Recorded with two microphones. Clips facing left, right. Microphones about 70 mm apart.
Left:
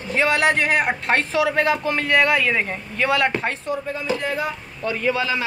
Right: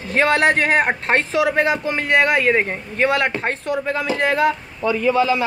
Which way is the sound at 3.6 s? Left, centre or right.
Right.